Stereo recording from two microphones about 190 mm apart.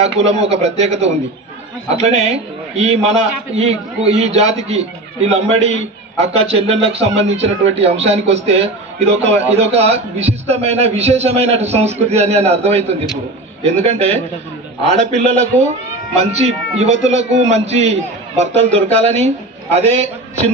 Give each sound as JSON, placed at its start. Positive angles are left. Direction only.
{"t": 0.3, "sound": "a man's voice", "side_deg": -35}